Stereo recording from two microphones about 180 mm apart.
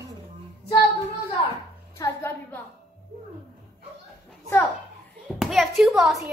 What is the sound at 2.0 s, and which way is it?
Music, 15° left (ahead or behind).